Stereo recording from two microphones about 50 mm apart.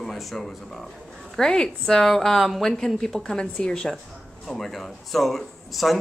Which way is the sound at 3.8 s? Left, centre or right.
Centre.